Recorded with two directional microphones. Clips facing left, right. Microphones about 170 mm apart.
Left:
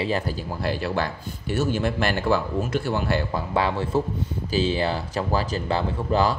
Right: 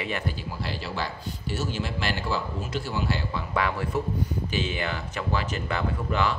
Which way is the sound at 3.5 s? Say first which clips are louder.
Left 3 dB; 30° left (ahead or behind).